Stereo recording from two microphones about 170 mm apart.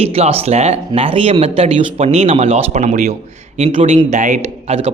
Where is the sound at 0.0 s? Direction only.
35° right (ahead or behind).